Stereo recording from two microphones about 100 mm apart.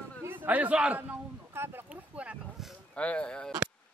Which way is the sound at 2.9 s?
10° left (ahead or behind).